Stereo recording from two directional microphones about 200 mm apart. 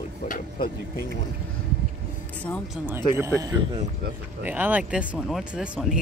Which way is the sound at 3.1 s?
15° right (ahead or behind).